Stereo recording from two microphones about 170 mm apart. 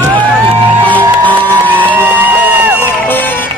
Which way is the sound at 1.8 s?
10° right (ahead or behind).